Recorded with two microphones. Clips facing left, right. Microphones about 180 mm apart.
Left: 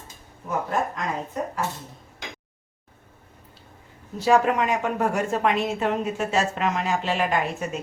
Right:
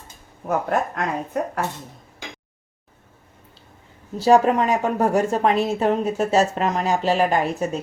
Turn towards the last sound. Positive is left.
turn(degrees=-35)  # may be behind; listen again after turning